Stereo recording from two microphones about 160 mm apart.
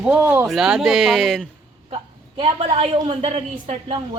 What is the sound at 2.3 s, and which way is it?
A woman's voice, 35° right (ahead or behind).